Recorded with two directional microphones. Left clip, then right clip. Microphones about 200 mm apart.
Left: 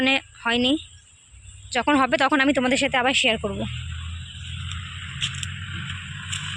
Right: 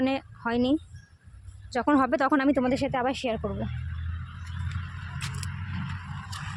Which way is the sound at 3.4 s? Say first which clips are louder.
Left 5 dB; 20° left (ahead or behind).